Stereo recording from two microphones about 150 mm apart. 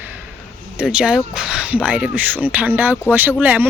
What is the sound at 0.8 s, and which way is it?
Speech, 5° right (ahead or behind).